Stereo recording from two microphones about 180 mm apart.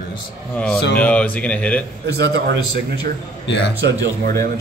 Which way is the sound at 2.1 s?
65° right (ahead or behind).